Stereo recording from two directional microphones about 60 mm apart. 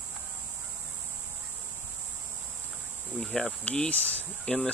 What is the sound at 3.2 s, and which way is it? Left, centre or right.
Speech, centre.